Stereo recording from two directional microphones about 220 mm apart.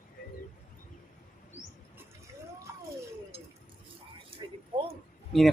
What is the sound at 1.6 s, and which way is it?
Bird, 35° left (ahead or behind).